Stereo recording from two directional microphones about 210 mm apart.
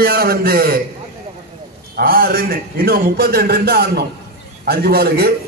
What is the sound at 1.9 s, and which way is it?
A man's voice, 45° right (ahead or behind).